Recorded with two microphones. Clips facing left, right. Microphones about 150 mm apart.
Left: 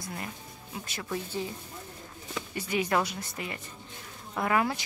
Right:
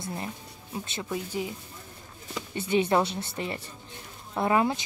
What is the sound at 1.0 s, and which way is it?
Speech, 15° right (ahead or behind).